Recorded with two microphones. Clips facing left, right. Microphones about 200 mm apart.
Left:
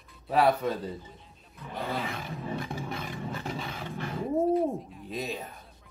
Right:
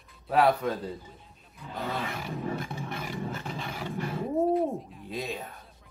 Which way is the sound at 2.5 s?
5° right (ahead or behind).